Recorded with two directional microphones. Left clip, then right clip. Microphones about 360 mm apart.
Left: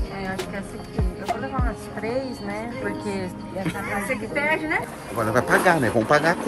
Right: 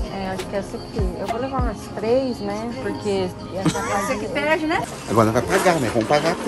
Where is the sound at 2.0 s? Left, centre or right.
Centre.